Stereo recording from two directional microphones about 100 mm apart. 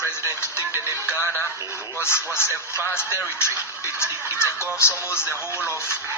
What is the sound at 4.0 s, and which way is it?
Speech, 25° left (ahead or behind).